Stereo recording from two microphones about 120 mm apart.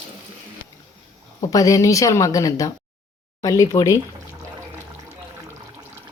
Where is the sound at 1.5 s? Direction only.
30° left (ahead or behind).